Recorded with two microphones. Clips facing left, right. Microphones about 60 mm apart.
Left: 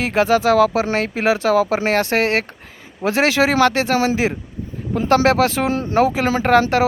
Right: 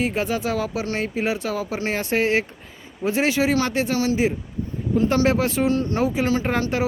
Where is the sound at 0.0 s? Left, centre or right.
Left.